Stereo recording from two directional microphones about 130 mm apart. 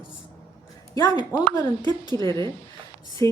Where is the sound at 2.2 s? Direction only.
20° left (ahead or behind).